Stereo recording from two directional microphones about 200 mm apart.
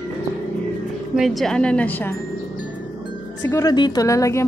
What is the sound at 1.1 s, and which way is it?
Speech, centre (ahead or behind).